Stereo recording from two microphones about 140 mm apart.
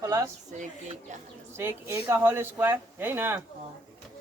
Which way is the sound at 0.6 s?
60° right (ahead or behind).